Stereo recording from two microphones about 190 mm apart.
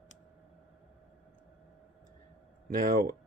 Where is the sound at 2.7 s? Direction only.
45° right (ahead or behind).